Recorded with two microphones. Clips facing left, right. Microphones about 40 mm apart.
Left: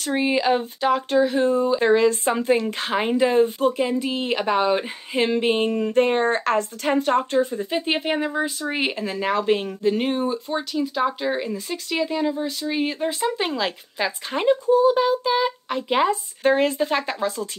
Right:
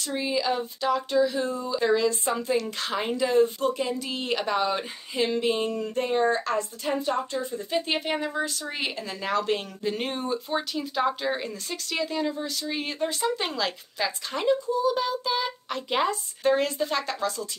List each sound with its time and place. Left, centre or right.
0.0 s speech: left
2.7 s speech: left
5.1 s speech: left
5.9 s a woman's voice: left
7.7 s speech: left
9.8 s speech: centre
10.5 s speech: centre; by 15.0 s left
15.0 s speech: left
16.4 s speech: left